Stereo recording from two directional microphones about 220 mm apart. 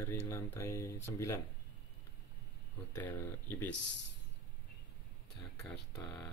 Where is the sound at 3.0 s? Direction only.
10° left (ahead or behind).